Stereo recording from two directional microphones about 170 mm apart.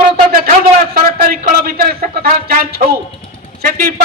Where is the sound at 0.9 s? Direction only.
60° right (ahead or behind).